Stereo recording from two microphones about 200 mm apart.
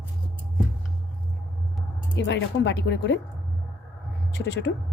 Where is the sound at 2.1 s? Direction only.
60° left (ahead or behind).